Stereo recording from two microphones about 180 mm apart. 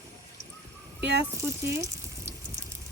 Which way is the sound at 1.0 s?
75° right (ahead or behind).